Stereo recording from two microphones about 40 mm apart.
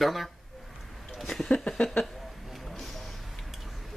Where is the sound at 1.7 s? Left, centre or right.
Left.